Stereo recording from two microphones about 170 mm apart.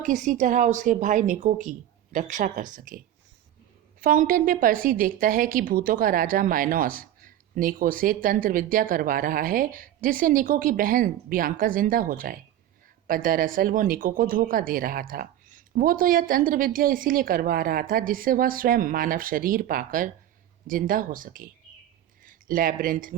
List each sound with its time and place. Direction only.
0.0 s a woman's voice: 45° right (ahead or behind)
4.0 s a woman's voice: 55° right (ahead or behind)